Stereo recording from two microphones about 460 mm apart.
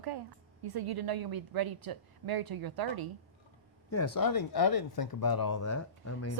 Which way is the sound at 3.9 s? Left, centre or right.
Left.